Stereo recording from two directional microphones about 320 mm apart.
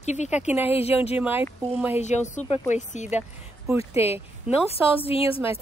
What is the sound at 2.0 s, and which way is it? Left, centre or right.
Speech, left.